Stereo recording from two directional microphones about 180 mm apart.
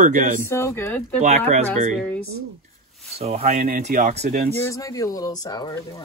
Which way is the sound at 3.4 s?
50° right (ahead or behind).